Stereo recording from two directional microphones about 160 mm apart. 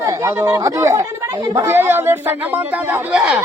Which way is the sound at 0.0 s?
20° right (ahead or behind).